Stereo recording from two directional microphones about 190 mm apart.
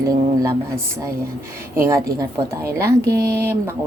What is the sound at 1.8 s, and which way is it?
Speech, 15° right (ahead or behind).